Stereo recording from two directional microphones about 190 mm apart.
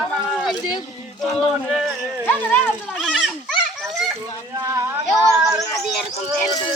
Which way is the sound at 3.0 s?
Centre (ahead or behind).